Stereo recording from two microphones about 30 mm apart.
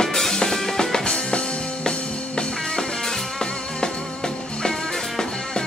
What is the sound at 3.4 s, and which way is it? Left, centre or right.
Music, left.